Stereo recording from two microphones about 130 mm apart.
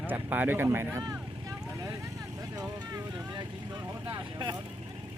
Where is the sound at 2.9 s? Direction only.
30° right (ahead or behind).